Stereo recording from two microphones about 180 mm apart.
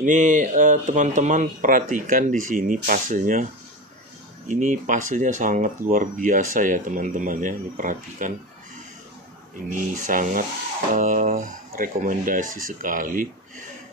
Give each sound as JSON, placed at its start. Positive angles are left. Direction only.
{"t": 0.0, "sound": "speech", "side_deg": -45}
{"t": 4.5, "sound": "speech", "side_deg": -45}
{"t": 9.7, "sound": "speech", "side_deg": -45}